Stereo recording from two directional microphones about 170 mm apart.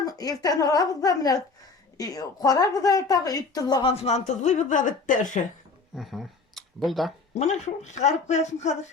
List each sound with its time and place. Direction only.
0.0 s a woman's voice: 20° left (ahead or behind)
3.9 s speech: 40° left (ahead or behind)
6.0 s speech: centre (ahead or behind)
7.3 s speech: 40° left (ahead or behind)